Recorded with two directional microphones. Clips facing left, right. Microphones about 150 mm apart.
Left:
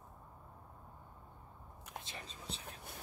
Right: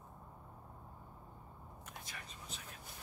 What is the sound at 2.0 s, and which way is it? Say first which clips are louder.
Whispering: left 4 dB; 25° left (ahead or behind).